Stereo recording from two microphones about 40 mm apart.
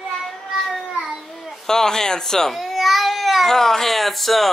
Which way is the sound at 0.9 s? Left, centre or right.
Centre.